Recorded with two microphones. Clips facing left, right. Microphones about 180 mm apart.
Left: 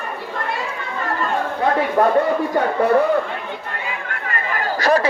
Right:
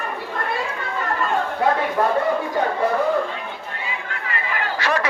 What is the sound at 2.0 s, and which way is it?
Speech, 35° left (ahead or behind).